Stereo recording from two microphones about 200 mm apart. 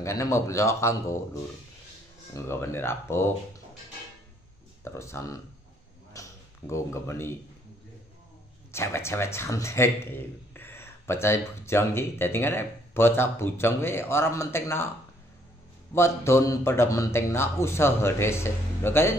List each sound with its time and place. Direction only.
0.0 s a man's voice: 15° left (ahead or behind)
2.3 s a man's voice: 15° left (ahead or behind)
4.8 s a man's voice: 15° left (ahead or behind)
6.2 s a sound: 15° left (ahead or behind)
6.7 s a man's voice: 15° left (ahead or behind)
8.7 s a man's voice: 15° left (ahead or behind)
15.9 s a man's voice: 15° left (ahead or behind)